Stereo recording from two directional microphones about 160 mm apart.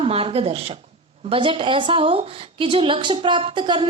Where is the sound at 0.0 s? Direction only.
35° right (ahead or behind).